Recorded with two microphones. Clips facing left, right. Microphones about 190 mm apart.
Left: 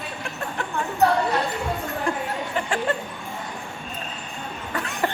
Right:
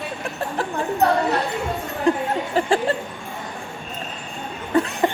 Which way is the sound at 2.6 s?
30° right (ahead or behind).